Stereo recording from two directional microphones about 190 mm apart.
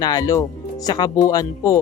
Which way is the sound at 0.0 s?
20° left (ahead or behind).